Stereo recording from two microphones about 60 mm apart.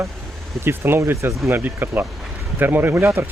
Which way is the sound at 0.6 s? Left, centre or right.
Right.